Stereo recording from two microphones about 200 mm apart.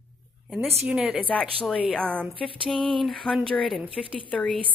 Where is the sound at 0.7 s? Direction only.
5° right (ahead or behind).